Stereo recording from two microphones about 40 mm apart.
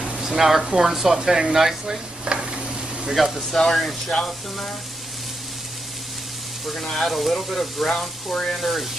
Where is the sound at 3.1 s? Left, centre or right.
Centre.